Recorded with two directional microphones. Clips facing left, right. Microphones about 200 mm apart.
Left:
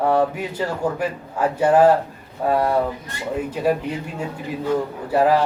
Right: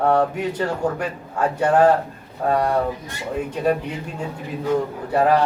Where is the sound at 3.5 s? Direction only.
5° left (ahead or behind).